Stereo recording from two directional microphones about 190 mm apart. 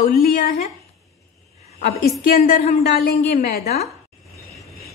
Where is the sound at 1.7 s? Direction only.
55° left (ahead or behind).